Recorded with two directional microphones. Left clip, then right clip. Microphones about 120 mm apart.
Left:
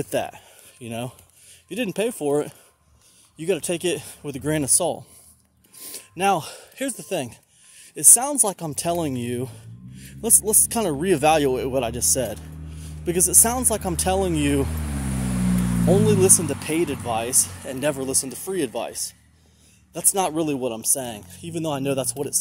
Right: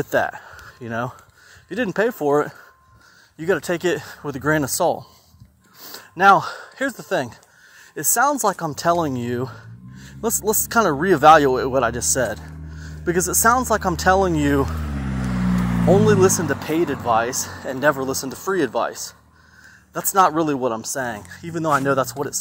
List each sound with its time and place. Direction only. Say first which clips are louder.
0.1 s speech: right 9 dB; 15° left (ahead or behind)
5.8 s a sound: right 7 dB; 25° left (ahead or behind)
6.8 s speech: right 5 dB; 20° left (ahead or behind)
14.7 s vehicle: right 2 dB; 50° right (ahead or behind)
15.0 s vehicle: right 1 dB; 35° right (ahead or behind)
15.8 s speech: right 4 dB; 15° left (ahead or behind)
16.6 s speech: right 4 dB; 45° right (ahead or behind)
17.0 s speech: right 6 dB; 15° left (ahead or behind)